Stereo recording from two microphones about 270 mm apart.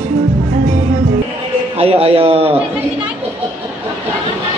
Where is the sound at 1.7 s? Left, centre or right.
Right.